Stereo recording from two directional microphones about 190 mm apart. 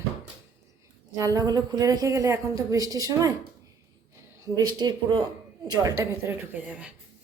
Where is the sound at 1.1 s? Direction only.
15° right (ahead or behind).